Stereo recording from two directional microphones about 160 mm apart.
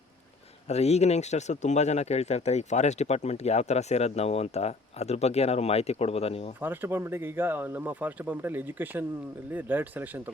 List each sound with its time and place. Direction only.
0.7 s speech: 40° left (ahead or behind)
6.6 s speech: 15° right (ahead or behind)